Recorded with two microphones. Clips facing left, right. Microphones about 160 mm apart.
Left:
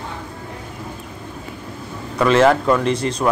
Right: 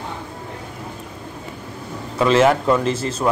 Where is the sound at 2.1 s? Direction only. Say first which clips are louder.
Left 1 dB; 30° right (ahead or behind).